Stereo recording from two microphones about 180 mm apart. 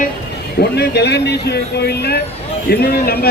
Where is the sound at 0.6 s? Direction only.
65° left (ahead or behind).